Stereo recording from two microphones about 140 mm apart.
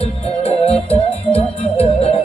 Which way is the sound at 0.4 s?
45° left (ahead or behind).